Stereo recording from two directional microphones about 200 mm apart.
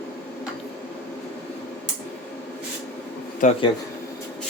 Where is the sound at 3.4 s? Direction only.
40° left (ahead or behind).